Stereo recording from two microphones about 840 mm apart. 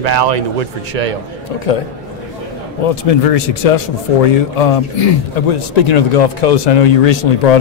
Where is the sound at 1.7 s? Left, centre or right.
Left.